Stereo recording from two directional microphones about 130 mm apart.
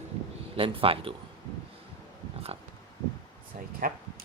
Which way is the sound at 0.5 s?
45° right (ahead or behind).